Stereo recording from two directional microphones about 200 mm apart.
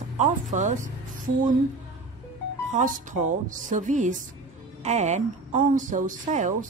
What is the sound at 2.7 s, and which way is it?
Speech, 40° right (ahead or behind).